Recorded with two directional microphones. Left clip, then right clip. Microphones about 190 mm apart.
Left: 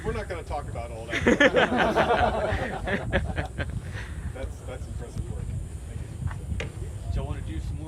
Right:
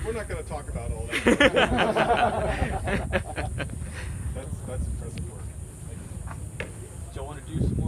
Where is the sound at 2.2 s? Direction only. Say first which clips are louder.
Even; 15° right (ahead or behind).